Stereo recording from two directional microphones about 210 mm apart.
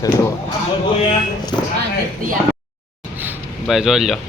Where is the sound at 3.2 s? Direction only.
5° right (ahead or behind).